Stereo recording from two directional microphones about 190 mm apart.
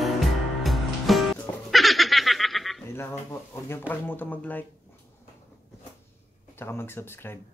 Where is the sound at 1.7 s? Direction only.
Centre (ahead or behind).